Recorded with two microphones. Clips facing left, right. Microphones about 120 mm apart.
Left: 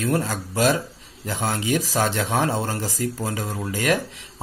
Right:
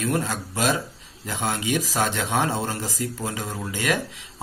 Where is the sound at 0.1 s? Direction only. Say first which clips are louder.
Left 2 dB; 35° left (ahead or behind).